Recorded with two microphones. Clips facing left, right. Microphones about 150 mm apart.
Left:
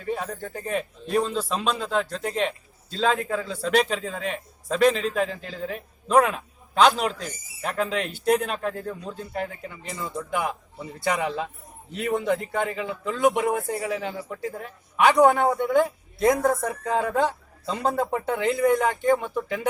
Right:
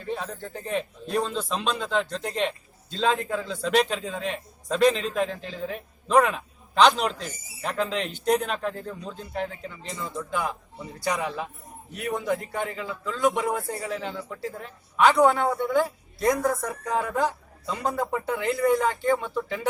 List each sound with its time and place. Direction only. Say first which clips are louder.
0.1 s a man's voice: left 3 dB; 10° left (ahead or behind)
10.2 s speech: left 2 dB; 15° left (ahead or behind)